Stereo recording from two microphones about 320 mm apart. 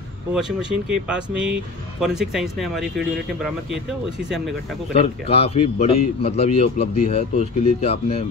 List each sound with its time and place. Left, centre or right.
0.3 s speech: centre
4.9 s a man's voice: centre